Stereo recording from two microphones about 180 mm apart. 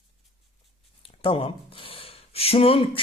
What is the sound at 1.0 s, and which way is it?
Speech, 30° left (ahead or behind).